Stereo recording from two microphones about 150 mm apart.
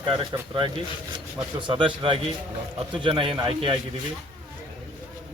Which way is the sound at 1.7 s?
35° right (ahead or behind).